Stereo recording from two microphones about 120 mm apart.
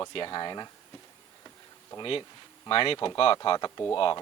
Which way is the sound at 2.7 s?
50° left (ahead or behind).